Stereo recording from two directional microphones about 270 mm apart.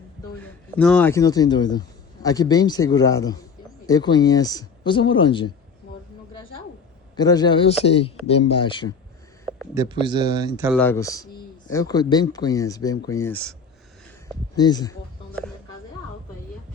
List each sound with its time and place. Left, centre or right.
0.3 s speech: centre
7.2 s speech: centre
9.5 s speech: centre
10.8 s speech: centre